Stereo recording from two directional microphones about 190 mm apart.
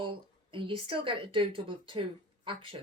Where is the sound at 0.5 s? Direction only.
25° right (ahead or behind).